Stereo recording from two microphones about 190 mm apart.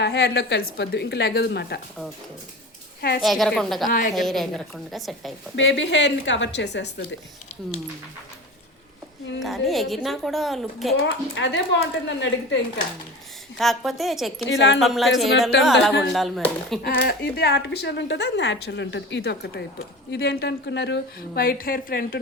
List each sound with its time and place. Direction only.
0.0 s speech: 60° left (ahead or behind)
3.2 s a woman's voice: centre (ahead or behind)
3.8 s a woman's voice: 45° left (ahead or behind)
4.1 s a woman's voice: centre (ahead or behind)
5.5 s a woman's voice: 75° left (ahead or behind)
9.4 s a woman's voice: centre (ahead or behind)
11.0 s a woman's voice: 65° left (ahead or behind)
13.6 s a woman's voice: centre (ahead or behind)
14.5 s a woman's voice: 70° left (ahead or behind)
14.8 s a woman's voice: centre (ahead or behind)
16.8 s speech: 60° left (ahead or behind)